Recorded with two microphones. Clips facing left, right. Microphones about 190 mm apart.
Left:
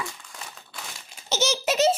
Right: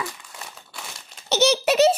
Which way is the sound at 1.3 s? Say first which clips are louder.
Right 6 dB; 65° right (ahead or behind).